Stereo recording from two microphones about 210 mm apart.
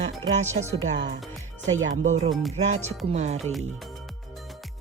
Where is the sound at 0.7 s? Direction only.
30° right (ahead or behind).